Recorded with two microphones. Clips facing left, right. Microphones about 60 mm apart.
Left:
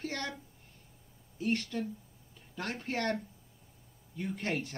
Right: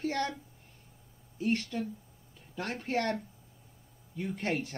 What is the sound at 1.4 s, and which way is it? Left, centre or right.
Speech, centre.